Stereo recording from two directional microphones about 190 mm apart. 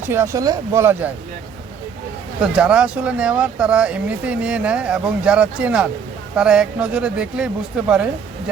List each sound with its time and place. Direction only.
0.0 s speech: 10° right (ahead or behind)
2.4 s speech: 5° right (ahead or behind)